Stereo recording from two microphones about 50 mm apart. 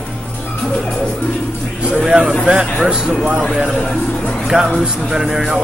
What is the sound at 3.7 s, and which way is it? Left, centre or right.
Speech, centre.